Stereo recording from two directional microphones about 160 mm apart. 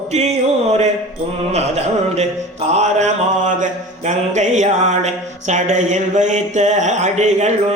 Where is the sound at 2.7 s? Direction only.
50° right (ahead or behind).